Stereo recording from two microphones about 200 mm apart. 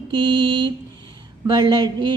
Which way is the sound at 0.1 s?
25° right (ahead or behind).